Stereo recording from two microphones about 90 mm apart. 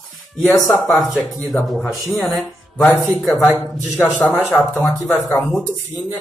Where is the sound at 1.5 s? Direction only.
15° left (ahead or behind).